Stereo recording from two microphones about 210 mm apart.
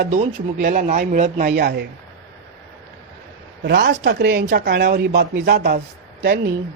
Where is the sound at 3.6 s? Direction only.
55° right (ahead or behind).